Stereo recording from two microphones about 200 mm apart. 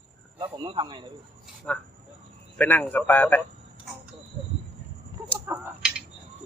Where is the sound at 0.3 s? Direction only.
20° right (ahead or behind).